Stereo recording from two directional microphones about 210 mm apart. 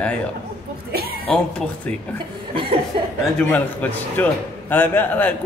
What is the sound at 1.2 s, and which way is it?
Speech, 5° left (ahead or behind).